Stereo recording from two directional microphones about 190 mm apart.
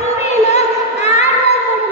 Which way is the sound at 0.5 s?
35° left (ahead or behind).